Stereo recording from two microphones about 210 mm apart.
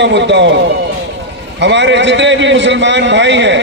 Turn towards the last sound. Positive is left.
turn(degrees=-60)  # may be behind; listen again after turning